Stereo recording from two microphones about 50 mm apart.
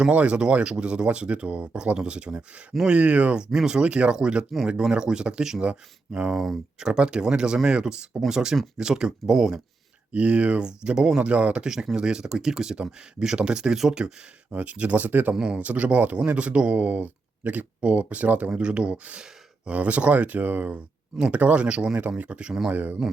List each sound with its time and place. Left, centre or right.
0.1 s speech: right
6.3 s speech: centre
10.1 s speech: right
11.7 s speech: centre
14.5 s speech: right
15.4 s speech: centre
22.7 s speech: right